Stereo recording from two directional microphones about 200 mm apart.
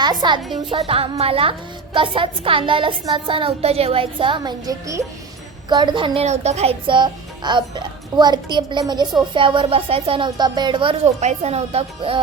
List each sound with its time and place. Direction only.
0.0 s speech: 20° right (ahead or behind)